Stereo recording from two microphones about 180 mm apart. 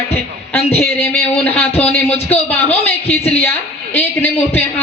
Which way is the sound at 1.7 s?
35° left (ahead or behind).